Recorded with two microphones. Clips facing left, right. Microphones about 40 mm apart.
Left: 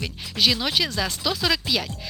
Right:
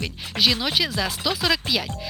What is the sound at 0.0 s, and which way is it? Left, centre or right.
Speech, centre.